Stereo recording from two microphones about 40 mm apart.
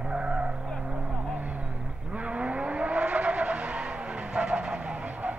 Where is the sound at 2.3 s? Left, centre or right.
Right.